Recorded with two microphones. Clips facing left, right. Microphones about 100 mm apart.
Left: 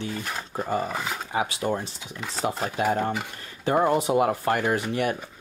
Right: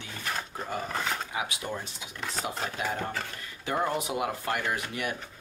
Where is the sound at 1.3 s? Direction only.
35° left (ahead or behind).